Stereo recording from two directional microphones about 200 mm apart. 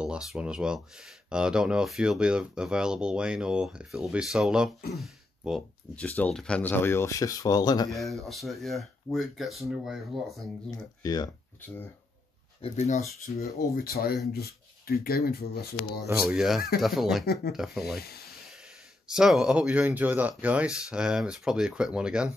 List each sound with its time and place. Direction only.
0.0 s speech: 5° right (ahead or behind); by 7.9 s 20° left (ahead or behind)
7.9 s speech: centre (ahead or behind)
11.0 s speech: 20° left (ahead or behind)
12.6 s speech: 35° left (ahead or behind)
13.7 s speech: 50° left (ahead or behind)
16.3 s speech: centre (ahead or behind)
19.0 s speech: 5° right (ahead or behind)